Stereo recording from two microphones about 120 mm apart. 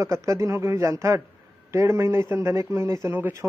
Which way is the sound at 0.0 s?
25° right (ahead or behind).